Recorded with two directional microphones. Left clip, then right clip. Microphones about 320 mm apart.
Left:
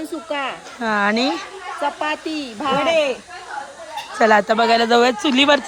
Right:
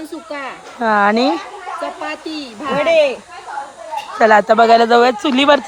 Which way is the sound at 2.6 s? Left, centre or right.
Centre.